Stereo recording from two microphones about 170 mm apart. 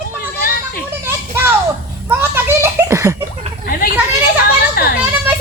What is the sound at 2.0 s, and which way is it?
Children playing, 15° right (ahead or behind).